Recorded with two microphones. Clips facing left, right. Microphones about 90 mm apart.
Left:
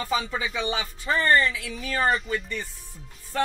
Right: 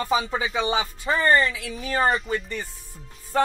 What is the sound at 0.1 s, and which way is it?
Speech, 20° right (ahead or behind).